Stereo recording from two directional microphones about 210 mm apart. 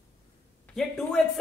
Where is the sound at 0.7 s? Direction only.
Centre (ahead or behind).